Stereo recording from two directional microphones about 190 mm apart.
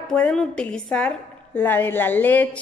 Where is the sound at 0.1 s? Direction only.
5° left (ahead or behind).